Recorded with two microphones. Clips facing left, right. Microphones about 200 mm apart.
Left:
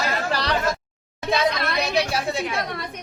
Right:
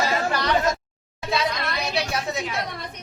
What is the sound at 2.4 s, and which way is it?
Speech, 55° left (ahead or behind).